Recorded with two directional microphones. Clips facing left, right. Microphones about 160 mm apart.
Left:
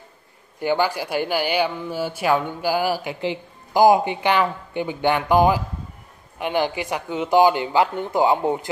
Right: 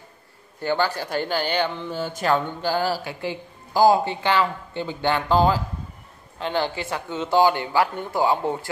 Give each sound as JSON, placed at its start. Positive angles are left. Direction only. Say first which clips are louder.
{"t": 0.6, "sound": "speech", "louder": "left 2 dB", "side_deg": 15}